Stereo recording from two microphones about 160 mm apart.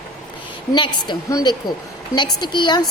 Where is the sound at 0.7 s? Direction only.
30° left (ahead or behind).